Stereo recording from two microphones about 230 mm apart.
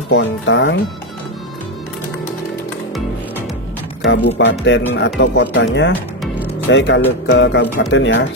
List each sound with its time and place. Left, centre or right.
0.1 s speech: left
4.0 s speech: left